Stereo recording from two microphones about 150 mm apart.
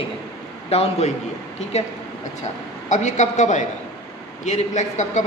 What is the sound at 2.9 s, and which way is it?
A woman's voice, 50° left (ahead or behind).